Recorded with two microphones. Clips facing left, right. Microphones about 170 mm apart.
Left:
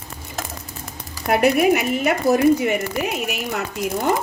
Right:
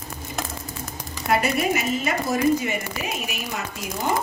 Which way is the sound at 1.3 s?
65° left (ahead or behind).